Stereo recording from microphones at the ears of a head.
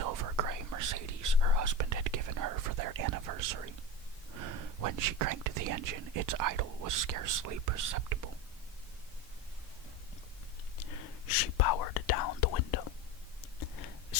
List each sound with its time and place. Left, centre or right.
0.0 s whispering: right
4.3 s speech: right
10.8 s whispering: left
13.4 s a sound: left